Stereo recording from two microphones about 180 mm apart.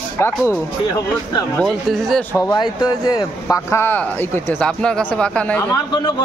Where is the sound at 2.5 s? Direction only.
25° left (ahead or behind); by 5.6 s 5° left (ahead or behind).